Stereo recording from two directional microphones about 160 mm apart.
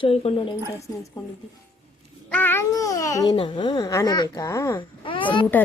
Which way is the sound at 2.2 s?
10° left (ahead or behind).